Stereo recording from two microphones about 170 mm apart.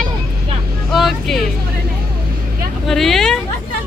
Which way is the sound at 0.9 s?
Centre (ahead or behind).